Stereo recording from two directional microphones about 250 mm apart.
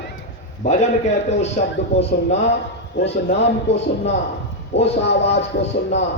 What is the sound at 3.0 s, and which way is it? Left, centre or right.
A man's voice, left.